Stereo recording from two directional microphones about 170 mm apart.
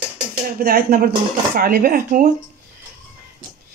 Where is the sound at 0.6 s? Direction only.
65° right (ahead or behind).